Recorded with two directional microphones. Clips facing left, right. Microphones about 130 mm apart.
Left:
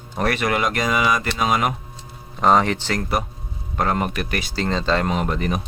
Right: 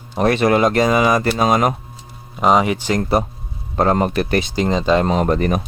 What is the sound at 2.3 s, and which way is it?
Speech, 10° right (ahead or behind).